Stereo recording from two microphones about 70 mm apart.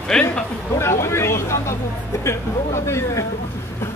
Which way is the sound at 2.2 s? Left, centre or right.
Left.